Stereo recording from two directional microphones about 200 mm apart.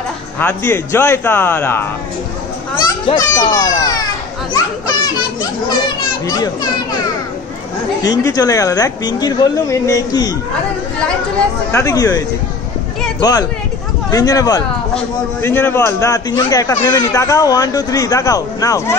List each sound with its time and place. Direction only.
0.4 s speech: 10° left (ahead or behind)
3.2 s speech: 20° left (ahead or behind)
5.9 s children playing: 20° left (ahead or behind)
8.0 s speech: 20° left (ahead or behind)
11.7 s speech: 15° left (ahead or behind)